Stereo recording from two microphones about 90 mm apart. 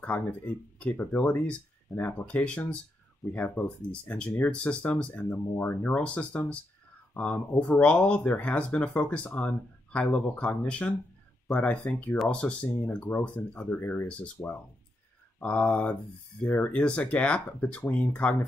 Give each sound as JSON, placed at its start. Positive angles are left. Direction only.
{"t": 0.0, "sound": "speech", "side_deg": 15}
{"t": 14.0, "sound": "speech", "side_deg": 10}